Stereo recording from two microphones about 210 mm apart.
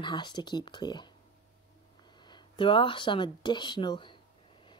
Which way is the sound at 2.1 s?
20° left (ahead or behind).